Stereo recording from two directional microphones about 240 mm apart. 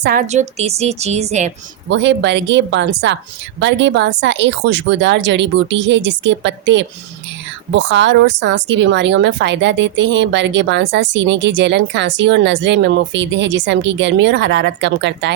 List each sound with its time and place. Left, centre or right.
0.0 s a woman's voice: right
1.9 s speech: right